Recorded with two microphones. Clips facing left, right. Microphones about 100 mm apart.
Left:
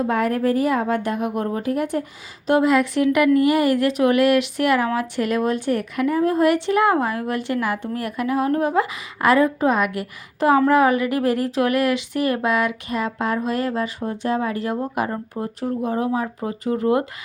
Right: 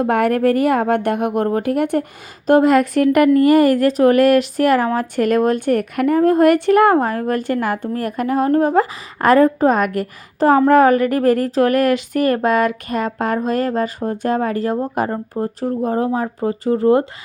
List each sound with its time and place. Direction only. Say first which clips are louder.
0.0 s speech: right 5 dB; 65° right (ahead or behind)
2.5 s a woman's voice: right 5 dB; 45° right (ahead or behind)